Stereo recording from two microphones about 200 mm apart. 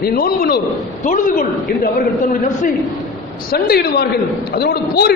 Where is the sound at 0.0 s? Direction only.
50° left (ahead or behind).